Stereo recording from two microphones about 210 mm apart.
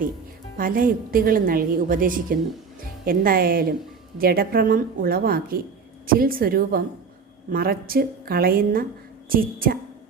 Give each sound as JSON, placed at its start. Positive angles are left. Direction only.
{"t": 0.5, "sound": "a woman's voice", "side_deg": -40}